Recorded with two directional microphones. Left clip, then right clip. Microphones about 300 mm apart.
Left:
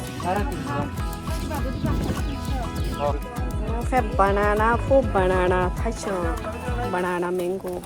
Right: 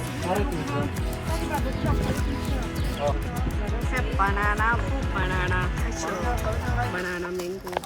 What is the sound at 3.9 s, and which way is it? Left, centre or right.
Music, centre.